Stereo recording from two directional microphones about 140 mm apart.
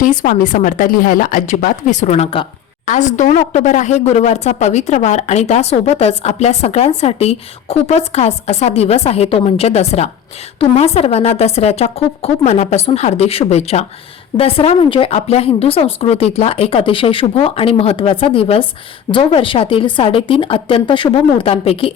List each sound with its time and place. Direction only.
0.0 s speech: 75° left (ahead or behind); by 2.5 s 45° left (ahead or behind)
2.8 s a woman's voice: 60° left (ahead or behind); by 21.9 s 45° left (ahead or behind)